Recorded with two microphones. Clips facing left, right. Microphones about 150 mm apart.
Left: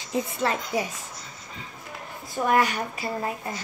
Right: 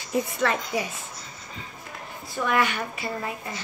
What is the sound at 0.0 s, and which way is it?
Speech, 25° left (ahead or behind).